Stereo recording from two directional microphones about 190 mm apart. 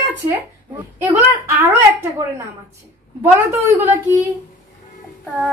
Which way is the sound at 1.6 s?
15° right (ahead or behind).